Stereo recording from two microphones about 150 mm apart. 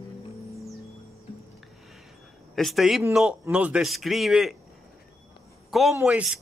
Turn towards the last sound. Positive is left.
turn(degrees=-10)  # may be behind; listen again after turning